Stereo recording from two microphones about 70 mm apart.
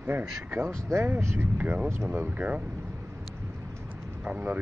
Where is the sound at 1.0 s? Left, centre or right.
Right.